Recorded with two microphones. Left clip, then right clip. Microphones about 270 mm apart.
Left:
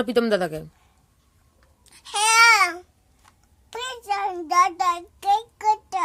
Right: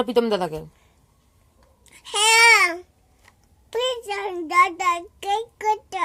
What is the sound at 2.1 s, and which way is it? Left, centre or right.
Babbling, centre.